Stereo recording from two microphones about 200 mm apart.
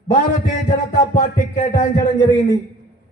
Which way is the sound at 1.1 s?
35° left (ahead or behind).